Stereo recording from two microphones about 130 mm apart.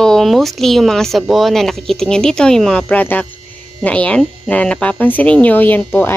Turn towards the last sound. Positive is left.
turn(degrees=15)  # may be behind; listen again after turning